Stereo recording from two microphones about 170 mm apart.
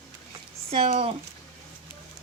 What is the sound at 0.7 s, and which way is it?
Speech, 35° right (ahead or behind).